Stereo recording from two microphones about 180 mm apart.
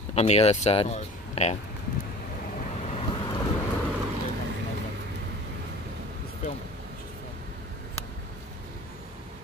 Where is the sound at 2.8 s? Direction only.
35° left (ahead or behind).